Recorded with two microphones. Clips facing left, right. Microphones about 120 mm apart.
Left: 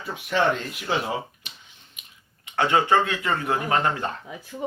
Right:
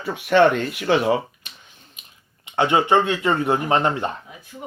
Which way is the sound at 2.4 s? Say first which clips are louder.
Right 3 dB; 20° right (ahead or behind).